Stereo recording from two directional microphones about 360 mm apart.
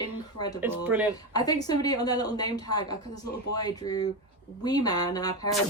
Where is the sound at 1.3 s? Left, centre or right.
Centre.